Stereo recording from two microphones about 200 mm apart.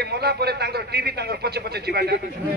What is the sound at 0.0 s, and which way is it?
A man's voice, 55° right (ahead or behind).